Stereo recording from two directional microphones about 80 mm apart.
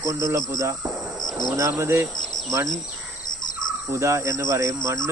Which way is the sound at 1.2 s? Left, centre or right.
Left.